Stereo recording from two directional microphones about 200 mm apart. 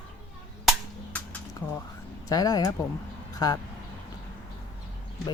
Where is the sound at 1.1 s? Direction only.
10° left (ahead or behind).